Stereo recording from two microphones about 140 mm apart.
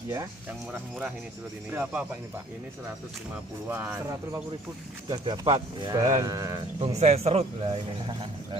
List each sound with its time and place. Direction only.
0.5 s speech: 10° right (ahead or behind)
3.6 s speech: 15° right (ahead or behind)
5.1 s speech: 35° right (ahead or behind)
6.8 s speech: 50° right (ahead or behind)